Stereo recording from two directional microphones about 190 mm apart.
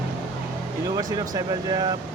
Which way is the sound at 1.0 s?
20° right (ahead or behind).